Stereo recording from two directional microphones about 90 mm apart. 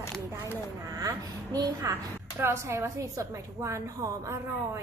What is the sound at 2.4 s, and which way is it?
A woman's voice, 30° right (ahead or behind).